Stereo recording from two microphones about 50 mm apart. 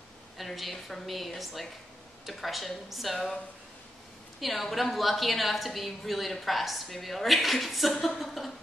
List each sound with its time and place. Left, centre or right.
0.4 s a woman's voice: centre
4.4 s a woman's voice: centre